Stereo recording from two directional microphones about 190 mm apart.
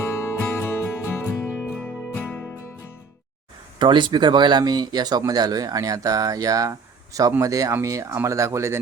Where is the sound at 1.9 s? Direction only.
5° right (ahead or behind).